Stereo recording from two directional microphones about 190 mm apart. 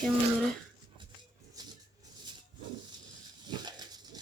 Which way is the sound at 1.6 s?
20° right (ahead or behind).